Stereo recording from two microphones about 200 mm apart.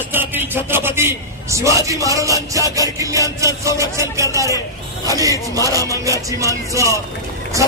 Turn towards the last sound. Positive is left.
turn(degrees=-15)  # may be behind; listen again after turning